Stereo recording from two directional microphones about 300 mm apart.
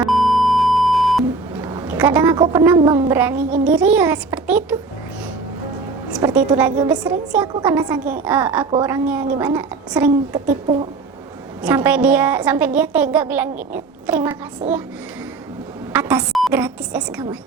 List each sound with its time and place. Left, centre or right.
0.0 s beep: centre
2.0 s a woman's voice: centre
6.1 s a woman's voice: centre
9.6 s a woman's voice: centre
10.5 s speech: centre
11.6 s a woman's voice: centre
15.9 s a woman's voice: centre